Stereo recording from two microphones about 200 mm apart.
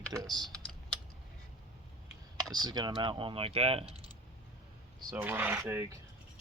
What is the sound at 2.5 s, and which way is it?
Speech, 20° right (ahead or behind).